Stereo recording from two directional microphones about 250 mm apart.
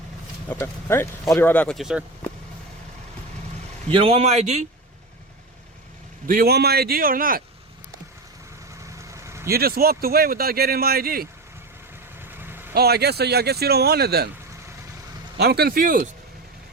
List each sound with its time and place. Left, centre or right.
0.4 s speech: centre
3.8 s a man's voice: right
6.2 s speech: right
8.9 s vehicle: centre
9.5 s speech: right
12.2 s vehicle: centre
12.7 s speech: right
15.4 s speech: right